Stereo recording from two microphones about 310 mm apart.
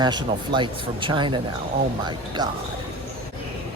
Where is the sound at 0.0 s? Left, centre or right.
Centre.